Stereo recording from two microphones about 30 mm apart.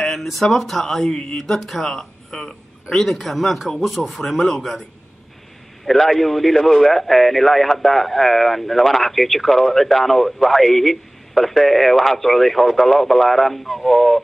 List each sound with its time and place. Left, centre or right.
0.2 s speech: centre
1.0 s speech: left
1.4 s speech: centre
2.9 s speech: centre
4.5 s speech: centre
6.0 s speech: centre